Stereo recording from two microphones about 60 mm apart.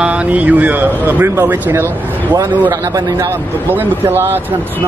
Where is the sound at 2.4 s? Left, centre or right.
Right.